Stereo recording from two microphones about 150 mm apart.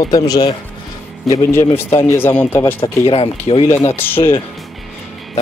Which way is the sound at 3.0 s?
40° left (ahead or behind).